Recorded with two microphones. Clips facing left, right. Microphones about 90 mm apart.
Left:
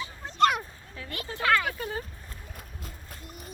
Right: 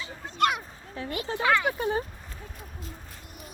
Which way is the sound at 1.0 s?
30° right (ahead or behind).